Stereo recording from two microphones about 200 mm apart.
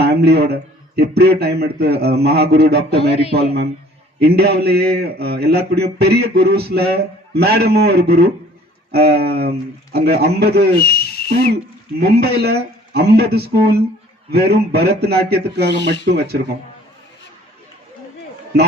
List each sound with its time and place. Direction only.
0.0 s a man's voice: 55° right (ahead or behind)
3.1 s speech: 30° left (ahead or behind)
4.2 s a man's voice: 50° right (ahead or behind)
15.7 s speech: 60° left (ahead or behind)
16.1 s a man's voice: 55° right (ahead or behind)